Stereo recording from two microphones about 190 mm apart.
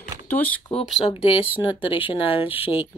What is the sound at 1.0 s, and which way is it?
Speech, 30° left (ahead or behind).